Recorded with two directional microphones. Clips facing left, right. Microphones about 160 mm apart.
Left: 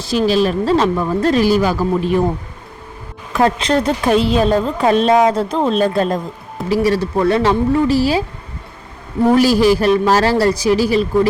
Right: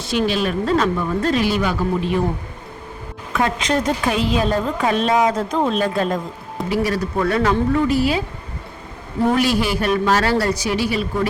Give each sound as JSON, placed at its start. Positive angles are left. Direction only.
{"t": 0.0, "sound": "a woman's voice", "side_deg": 35}
{"t": 3.3, "sound": "a woman's voice", "side_deg": 35}
{"t": 9.4, "sound": "a woman's voice", "side_deg": 40}